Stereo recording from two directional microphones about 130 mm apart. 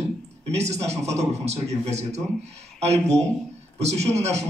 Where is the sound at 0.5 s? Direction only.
55° right (ahead or behind).